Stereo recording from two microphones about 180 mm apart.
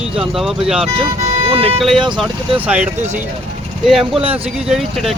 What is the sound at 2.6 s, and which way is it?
A man's voice, 5° right (ahead or behind).